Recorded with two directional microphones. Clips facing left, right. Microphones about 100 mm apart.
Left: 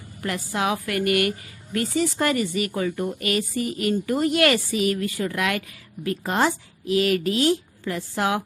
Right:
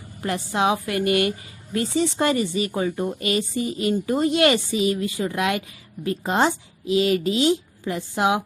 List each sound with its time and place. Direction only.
0.2 s a woman's voice: 25° right (ahead or behind)